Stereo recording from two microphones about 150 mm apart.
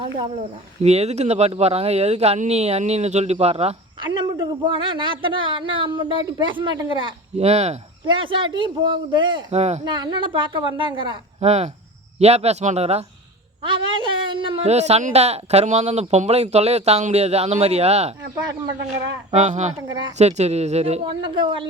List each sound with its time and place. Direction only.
0.8 s speech: 45° right (ahead or behind)
8.0 s a woman's voice: 35° right (ahead or behind)
9.8 s a woman's voice: 30° right (ahead or behind)
13.6 s speech: 35° right (ahead or behind)
19.3 s speech: 50° right (ahead or behind); by 21.7 s 30° right (ahead or behind)